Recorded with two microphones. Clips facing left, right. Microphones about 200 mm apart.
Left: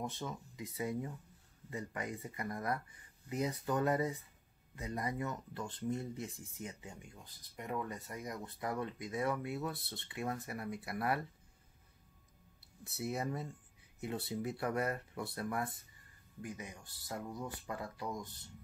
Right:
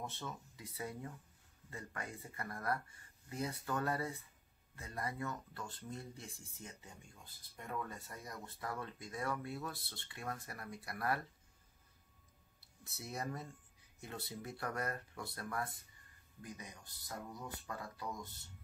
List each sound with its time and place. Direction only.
0.0 s speech: 15° left (ahead or behind)
12.5 s a sound: 60° left (ahead or behind)
13.1 s speech: 25° left (ahead or behind)
17.3 s speech: 25° left (ahead or behind)